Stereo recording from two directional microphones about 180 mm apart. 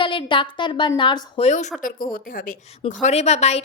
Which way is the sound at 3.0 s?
35° left (ahead or behind).